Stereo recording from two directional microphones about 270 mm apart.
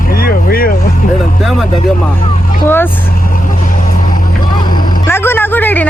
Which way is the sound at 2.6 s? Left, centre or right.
Centre.